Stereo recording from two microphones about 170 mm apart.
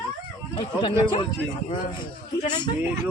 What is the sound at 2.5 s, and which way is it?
Speech, 25° left (ahead or behind).